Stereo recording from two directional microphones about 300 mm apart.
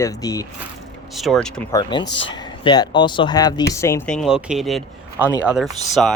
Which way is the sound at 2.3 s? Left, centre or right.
Centre.